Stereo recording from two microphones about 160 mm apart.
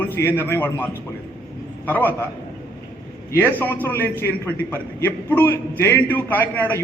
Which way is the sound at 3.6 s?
10° left (ahead or behind).